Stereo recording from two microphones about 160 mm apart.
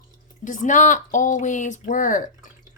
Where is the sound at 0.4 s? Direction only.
50° left (ahead or behind).